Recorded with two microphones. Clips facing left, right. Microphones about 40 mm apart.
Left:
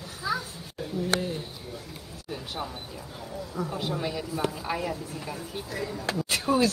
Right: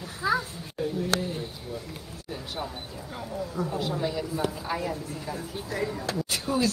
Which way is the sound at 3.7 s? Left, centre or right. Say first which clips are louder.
Right 2 dB; left.